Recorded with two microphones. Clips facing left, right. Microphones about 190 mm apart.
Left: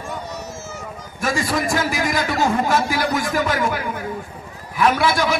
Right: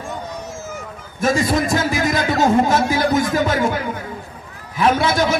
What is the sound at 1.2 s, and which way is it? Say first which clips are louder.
A man's voice: right 4 dB; 20° right (ahead or behind).